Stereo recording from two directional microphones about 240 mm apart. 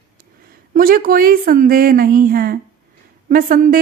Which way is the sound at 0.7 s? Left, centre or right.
Right.